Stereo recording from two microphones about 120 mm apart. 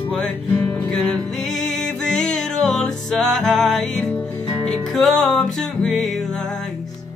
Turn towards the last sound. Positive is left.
turn(degrees=5)  # may be behind; listen again after turning